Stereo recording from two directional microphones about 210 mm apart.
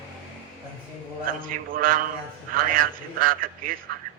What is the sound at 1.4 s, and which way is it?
A man's voice, 40° right (ahead or behind).